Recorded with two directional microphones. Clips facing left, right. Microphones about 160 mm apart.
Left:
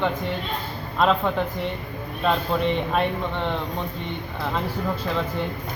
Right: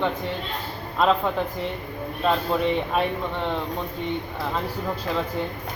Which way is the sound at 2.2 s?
5° right (ahead or behind).